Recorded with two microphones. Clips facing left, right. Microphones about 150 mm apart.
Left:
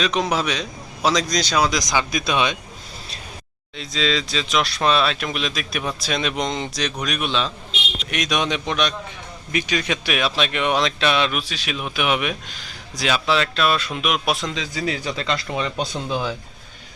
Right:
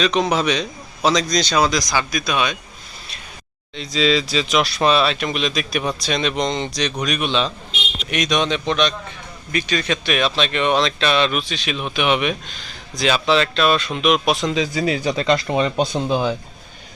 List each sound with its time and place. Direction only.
0.0 s a man's voice: 5° left (ahead or behind); by 2.6 s 25° left (ahead or behind)
3.8 s a man's voice: 5° right (ahead or behind)
14.8 s speech: 15° right (ahead or behind)
15.4 s speech: 30° right (ahead or behind)